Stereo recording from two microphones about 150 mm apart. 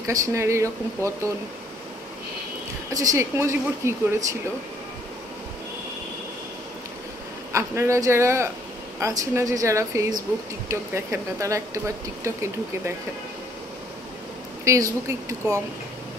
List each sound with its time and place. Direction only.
0.0 s speech: 20° right (ahead or behind)
2.9 s speech: 25° right (ahead or behind)
7.5 s speech: 20° right (ahead or behind)
14.6 s speech: 20° right (ahead or behind)